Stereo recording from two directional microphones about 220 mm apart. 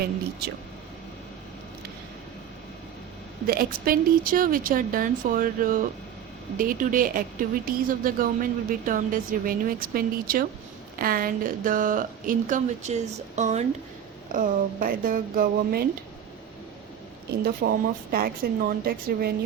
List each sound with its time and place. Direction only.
0.0 s speech: 45° right (ahead or behind)
3.4 s a woman's voice: 40° right (ahead or behind)
18.1 s a woman's voice: 40° right (ahead or behind)